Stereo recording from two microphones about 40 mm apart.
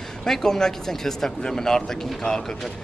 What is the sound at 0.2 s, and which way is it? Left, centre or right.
Speech, centre.